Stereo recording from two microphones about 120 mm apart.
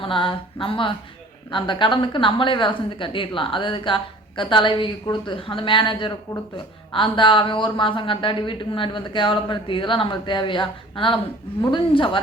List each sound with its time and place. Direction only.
0.0 s a woman's voice: 45° left (ahead or behind)